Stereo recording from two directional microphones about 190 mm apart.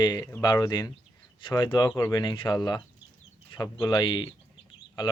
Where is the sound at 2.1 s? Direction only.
25° left (ahead or behind).